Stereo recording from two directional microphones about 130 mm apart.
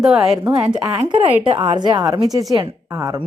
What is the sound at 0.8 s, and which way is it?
Speech, 25° right (ahead or behind).